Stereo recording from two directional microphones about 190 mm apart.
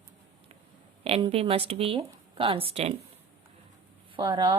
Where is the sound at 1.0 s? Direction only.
30° right (ahead or behind).